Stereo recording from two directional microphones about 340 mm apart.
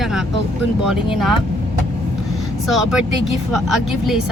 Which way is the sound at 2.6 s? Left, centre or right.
Centre.